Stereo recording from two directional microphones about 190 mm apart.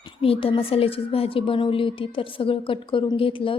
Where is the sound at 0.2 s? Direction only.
30° left (ahead or behind).